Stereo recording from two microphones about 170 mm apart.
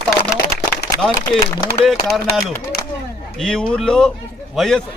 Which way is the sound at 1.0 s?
Centre (ahead or behind).